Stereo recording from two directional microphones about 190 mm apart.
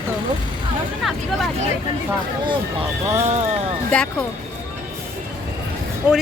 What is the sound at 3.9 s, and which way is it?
Speech, 5° left (ahead or behind).